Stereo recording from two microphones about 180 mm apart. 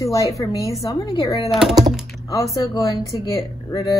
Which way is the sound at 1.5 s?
Centre (ahead or behind).